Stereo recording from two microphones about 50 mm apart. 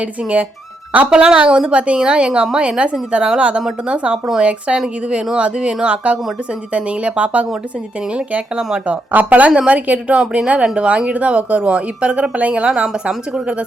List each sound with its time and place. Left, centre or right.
0.0 s a woman's voice: right